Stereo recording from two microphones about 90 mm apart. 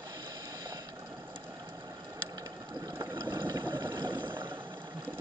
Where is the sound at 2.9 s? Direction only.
30° right (ahead or behind).